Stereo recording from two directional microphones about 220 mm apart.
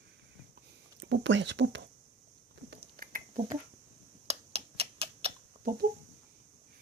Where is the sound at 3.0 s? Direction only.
40° right (ahead or behind).